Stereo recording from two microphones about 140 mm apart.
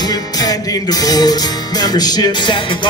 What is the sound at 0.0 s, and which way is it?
Music, 25° left (ahead or behind).